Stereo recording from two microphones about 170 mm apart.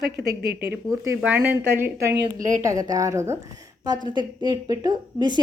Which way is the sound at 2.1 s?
50° right (ahead or behind).